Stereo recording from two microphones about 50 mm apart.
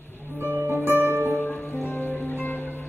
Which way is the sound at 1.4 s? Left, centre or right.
Left.